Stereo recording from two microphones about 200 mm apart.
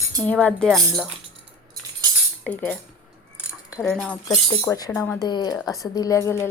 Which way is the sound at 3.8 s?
Centre (ahead or behind).